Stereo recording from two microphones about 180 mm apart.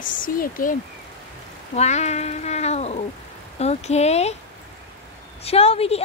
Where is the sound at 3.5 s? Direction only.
35° left (ahead or behind).